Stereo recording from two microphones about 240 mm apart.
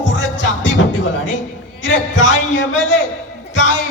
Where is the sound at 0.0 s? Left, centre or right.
Left.